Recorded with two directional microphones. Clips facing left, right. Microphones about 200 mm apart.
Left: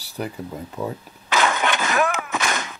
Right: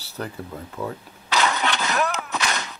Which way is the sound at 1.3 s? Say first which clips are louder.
Left 2 dB; 50° left (ahead or behind).